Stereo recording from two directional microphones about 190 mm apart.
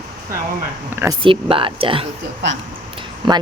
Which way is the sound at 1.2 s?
25° right (ahead or behind).